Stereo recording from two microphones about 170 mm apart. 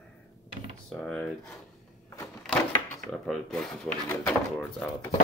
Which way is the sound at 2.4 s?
10° left (ahead or behind).